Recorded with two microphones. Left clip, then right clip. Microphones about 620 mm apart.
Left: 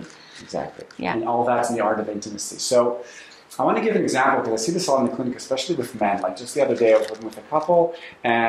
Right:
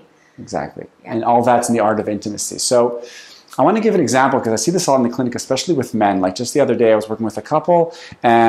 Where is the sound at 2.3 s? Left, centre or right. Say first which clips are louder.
Right 5 dB; right.